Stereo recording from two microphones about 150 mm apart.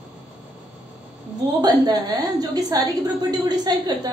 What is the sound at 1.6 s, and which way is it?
A woman's voice, 25° right (ahead or behind).